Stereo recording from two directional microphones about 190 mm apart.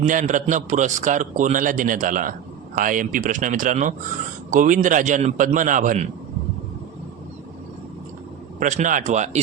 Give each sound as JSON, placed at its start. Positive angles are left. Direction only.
{"t": 0.0, "sound": "a man's voice", "side_deg": -45}
{"t": 8.5, "sound": "speech", "side_deg": -40}